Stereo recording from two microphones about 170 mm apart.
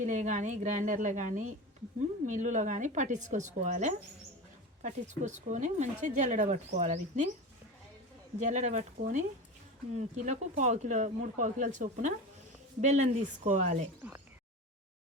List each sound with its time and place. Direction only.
0.0 s speech: 45° right (ahead or behind)
8.4 s speech: 45° right (ahead or behind)
14.0 s speech: 10° right (ahead or behind)